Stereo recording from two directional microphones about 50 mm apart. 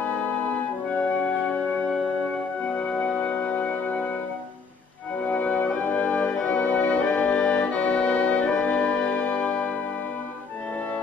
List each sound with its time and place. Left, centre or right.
2.6 s music: left
5.2 s music: left